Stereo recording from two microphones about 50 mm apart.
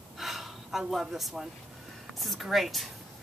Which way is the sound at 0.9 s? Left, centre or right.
Centre.